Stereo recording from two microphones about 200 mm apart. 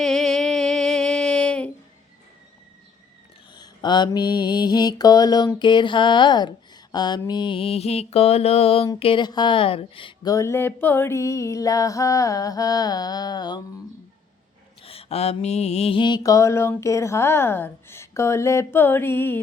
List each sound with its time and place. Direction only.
0.0 s a sound: centre (ahead or behind)
3.5 s mantra: 20° left (ahead or behind)
9.0 s speech: 25° left (ahead or behind)
14.8 s speech: 30° left (ahead or behind); by 19.4 s 10° left (ahead or behind)